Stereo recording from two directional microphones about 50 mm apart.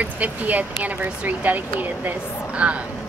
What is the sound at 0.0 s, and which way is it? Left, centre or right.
Speech, right.